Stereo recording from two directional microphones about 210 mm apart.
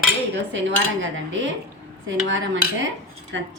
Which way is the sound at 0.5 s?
65° right (ahead or behind).